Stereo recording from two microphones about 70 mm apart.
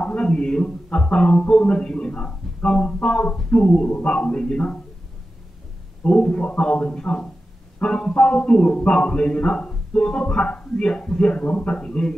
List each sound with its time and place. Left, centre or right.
0.0 s a man's voice: centre
6.0 s a man's voice: centre